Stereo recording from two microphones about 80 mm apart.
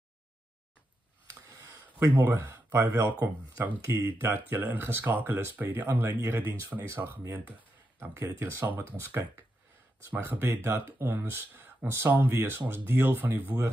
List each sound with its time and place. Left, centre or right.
1.5 s a sound: right
2.1 s speech: right
10.1 s speech: right